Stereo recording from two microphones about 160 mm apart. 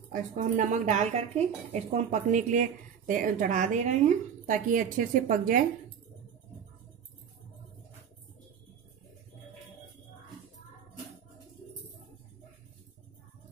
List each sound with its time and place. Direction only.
0.1 s speech: 50° right (ahead or behind)